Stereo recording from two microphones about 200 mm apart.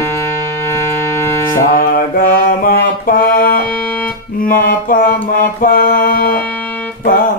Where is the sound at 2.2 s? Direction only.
45° left (ahead or behind).